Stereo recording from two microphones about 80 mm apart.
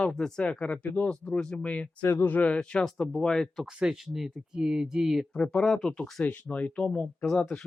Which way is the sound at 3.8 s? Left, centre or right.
Centre.